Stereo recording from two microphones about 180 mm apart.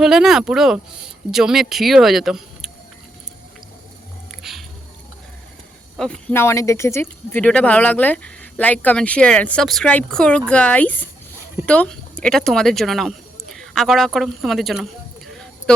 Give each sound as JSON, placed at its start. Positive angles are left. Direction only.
{"t": 0.0, "sound": "speech", "side_deg": 0}
{"t": 4.3, "sound": "music", "side_deg": 0}
{"t": 6.0, "sound": "speech", "side_deg": 5}